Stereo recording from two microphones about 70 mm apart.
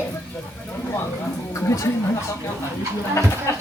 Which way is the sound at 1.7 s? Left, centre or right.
Left.